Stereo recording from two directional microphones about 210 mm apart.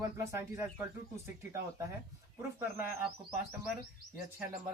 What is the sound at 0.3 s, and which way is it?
Speech, 15° right (ahead or behind).